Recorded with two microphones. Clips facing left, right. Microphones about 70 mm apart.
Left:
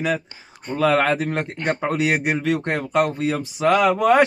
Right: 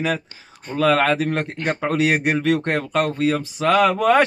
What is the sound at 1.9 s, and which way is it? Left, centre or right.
Speech, centre.